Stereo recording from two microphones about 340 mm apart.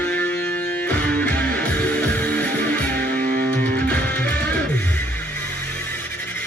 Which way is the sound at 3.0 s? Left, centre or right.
Right.